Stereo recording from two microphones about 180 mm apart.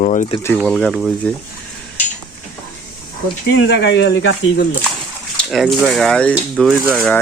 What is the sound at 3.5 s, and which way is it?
Speech, 85° left.